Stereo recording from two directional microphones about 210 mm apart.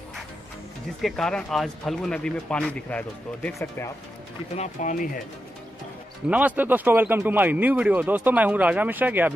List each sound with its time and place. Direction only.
1.0 s speech: 5° left (ahead or behind)
4.6 s speech: 40° left (ahead or behind)
6.2 s speech: 5° right (ahead or behind)